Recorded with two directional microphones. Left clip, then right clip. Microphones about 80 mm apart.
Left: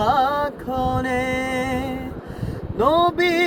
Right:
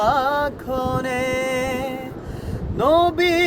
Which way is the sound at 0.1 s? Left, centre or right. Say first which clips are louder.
Even; right.